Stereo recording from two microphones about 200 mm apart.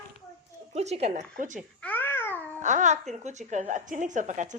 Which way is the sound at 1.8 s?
10° left (ahead or behind).